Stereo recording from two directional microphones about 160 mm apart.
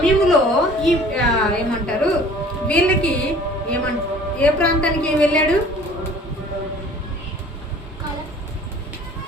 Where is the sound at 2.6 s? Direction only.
5° left (ahead or behind).